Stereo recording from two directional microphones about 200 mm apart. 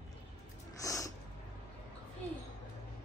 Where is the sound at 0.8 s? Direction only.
15° left (ahead or behind).